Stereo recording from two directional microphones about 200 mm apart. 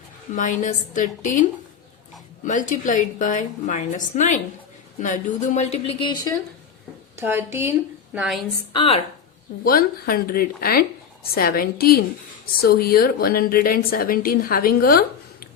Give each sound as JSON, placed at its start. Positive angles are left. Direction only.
{"t": 0.3, "sound": "a woman's voice", "side_deg": 40}
{"t": 7.2, "sound": "a woman's voice", "side_deg": -10}
{"t": 8.7, "sound": "speech", "side_deg": 25}
{"t": 9.6, "sound": "speech", "side_deg": 45}